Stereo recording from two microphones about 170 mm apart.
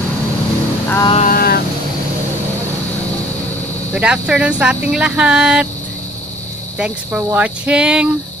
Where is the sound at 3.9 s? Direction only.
5° right (ahead or behind).